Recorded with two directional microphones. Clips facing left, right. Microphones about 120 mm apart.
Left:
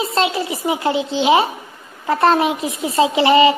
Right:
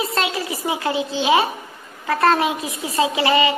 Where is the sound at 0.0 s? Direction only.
25° left (ahead or behind).